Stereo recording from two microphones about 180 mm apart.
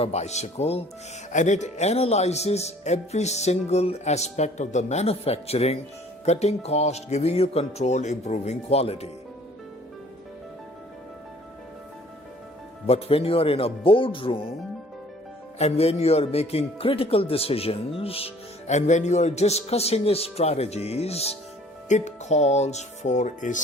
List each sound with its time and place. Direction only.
0.0 s speech: 35° left (ahead or behind)
12.9 s speech: 35° left (ahead or behind)
15.5 s speech: 35° left (ahead or behind)